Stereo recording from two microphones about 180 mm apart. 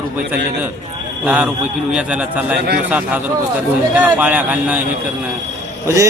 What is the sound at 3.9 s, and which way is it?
Speech, 10° right (ahead or behind).